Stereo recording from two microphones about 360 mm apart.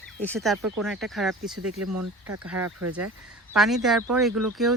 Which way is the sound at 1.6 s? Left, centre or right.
Right.